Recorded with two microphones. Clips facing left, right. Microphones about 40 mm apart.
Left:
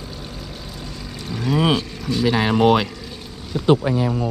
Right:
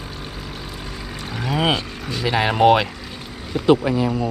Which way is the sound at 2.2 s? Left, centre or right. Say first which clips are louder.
Right 1 dB; right.